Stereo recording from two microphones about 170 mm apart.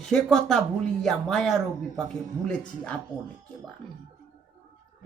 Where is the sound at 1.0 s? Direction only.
Centre (ahead or behind).